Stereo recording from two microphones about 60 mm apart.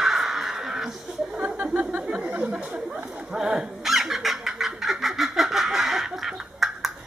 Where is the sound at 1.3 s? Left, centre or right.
Right.